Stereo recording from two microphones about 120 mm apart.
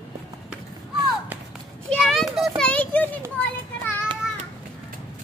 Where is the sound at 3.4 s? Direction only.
15° left (ahead or behind).